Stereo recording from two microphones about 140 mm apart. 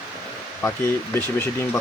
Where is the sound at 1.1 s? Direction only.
15° left (ahead or behind).